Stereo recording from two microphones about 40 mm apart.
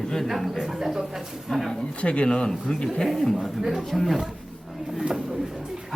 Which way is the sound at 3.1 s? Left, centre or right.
Centre.